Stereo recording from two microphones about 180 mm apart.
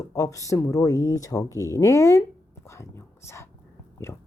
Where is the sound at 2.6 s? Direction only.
15° left (ahead or behind).